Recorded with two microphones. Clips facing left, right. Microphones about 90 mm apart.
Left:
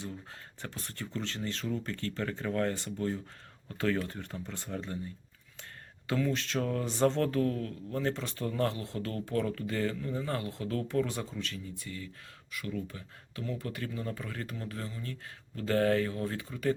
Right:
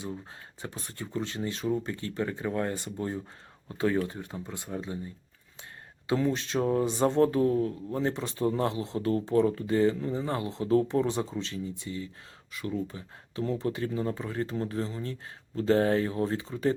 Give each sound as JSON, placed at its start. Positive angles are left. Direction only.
{"t": 0.6, "sound": "speech", "side_deg": -15}
{"t": 6.1, "sound": "speech", "side_deg": -20}